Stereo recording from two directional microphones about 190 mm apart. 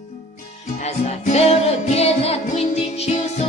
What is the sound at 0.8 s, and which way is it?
Music, 35° left (ahead or behind).